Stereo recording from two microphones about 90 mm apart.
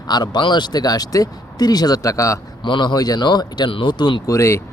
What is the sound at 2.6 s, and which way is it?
Speech, 60° left (ahead or behind).